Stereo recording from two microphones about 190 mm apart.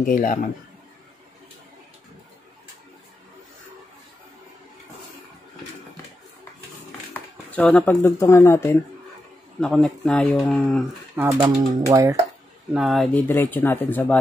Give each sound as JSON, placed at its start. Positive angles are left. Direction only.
{"t": 0.0, "sound": "speech", "side_deg": 45}
{"t": 7.2, "sound": "speech", "side_deg": 10}
{"t": 9.6, "sound": "speech", "side_deg": 5}
{"t": 11.3, "sound": "speech", "side_deg": -20}
{"t": 12.7, "sound": "speech", "side_deg": 0}